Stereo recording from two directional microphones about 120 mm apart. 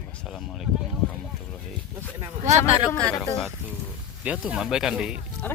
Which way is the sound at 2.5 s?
60° right (ahead or behind).